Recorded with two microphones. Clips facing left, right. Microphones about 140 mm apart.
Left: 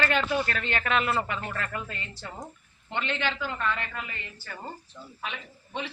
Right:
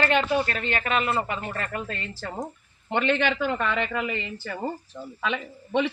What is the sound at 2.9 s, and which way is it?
Speech, 65° right (ahead or behind).